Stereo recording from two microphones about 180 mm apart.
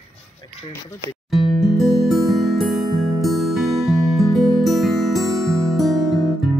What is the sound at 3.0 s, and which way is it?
Music, 20° right (ahead or behind).